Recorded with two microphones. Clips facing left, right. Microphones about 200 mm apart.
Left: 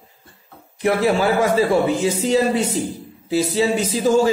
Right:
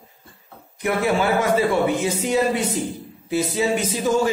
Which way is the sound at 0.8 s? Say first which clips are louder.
Left 3 dB; 35° left (ahead or behind).